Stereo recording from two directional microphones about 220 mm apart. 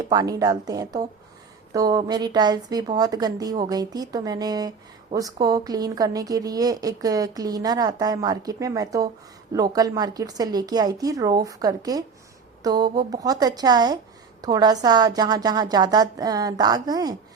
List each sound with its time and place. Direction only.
0.1 s a woman's voice: 15° right (ahead or behind)